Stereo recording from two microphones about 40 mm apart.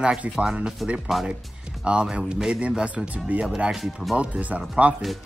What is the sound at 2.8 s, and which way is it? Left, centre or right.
Speech, right.